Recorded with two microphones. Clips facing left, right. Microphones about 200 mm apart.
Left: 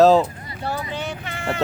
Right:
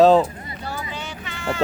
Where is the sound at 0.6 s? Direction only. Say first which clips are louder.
Left 5 dB; 60° left (ahead or behind).